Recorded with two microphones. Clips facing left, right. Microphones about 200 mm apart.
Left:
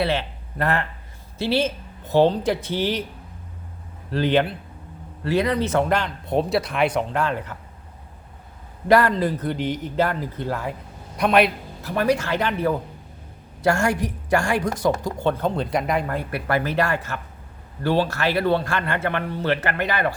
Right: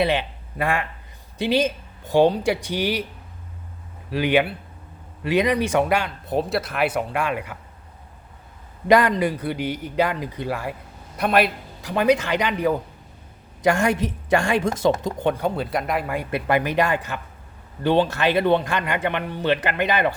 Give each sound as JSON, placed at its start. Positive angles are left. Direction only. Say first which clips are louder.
{"t": 0.0, "sound": "speech", "louder": "right 2 dB", "side_deg": -15}
{"t": 4.1, "sound": "speech", "louder": "even", "side_deg": -10}
{"t": 8.9, "sound": "a man's voice", "louder": "even", "side_deg": -15}
{"t": 11.8, "sound": "a woman's voice", "louder": "right 2 dB", "side_deg": -15}
{"t": 16.3, "sound": "a woman's voice", "louder": "right 3 dB", "side_deg": -15}